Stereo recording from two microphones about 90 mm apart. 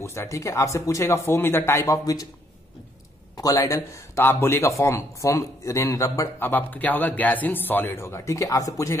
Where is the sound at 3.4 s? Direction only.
40° left (ahead or behind).